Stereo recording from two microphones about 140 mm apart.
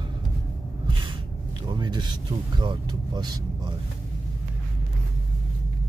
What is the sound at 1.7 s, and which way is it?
Speech, 30° right (ahead or behind).